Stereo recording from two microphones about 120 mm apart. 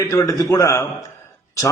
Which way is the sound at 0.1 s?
25° left (ahead or behind).